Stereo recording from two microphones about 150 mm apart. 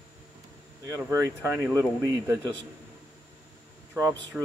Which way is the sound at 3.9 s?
20° right (ahead or behind).